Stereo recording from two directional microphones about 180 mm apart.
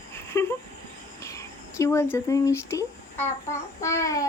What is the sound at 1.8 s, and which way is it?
Speech, 15° left (ahead or behind).